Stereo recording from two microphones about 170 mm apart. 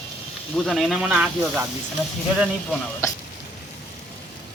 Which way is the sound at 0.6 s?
Centre (ahead or behind).